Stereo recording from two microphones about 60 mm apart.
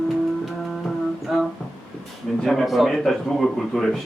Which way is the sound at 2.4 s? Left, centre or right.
Centre.